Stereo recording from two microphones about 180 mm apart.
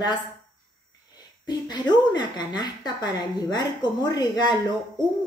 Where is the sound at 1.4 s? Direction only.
25° left (ahead or behind).